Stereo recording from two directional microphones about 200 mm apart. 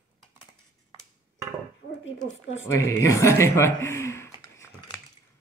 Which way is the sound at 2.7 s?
15° left (ahead or behind).